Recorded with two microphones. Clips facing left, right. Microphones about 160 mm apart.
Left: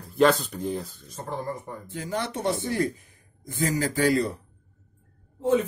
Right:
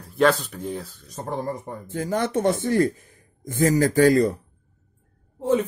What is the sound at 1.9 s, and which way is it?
Speech, 45° right (ahead or behind).